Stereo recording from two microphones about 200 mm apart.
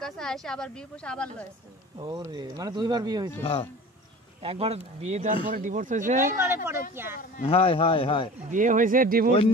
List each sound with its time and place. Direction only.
0.0 s speech: 5° left (ahead or behind)
2.0 s speech: 20° right (ahead or behind)
4.4 s speech: 30° right (ahead or behind)
6.2 s speech: 15° right (ahead or behind)
7.4 s speech: 25° left (ahead or behind)
8.5 s speech: 40° right (ahead or behind)